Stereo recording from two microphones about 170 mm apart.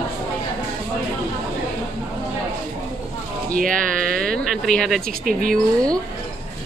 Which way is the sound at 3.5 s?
55° right (ahead or behind).